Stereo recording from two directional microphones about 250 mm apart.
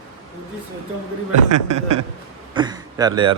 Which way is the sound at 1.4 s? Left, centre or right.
Right.